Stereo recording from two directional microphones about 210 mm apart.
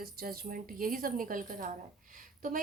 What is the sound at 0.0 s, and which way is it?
A woman's voice, 45° right (ahead or behind).